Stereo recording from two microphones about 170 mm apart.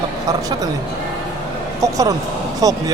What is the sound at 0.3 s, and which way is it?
Speech, 20° right (ahead or behind).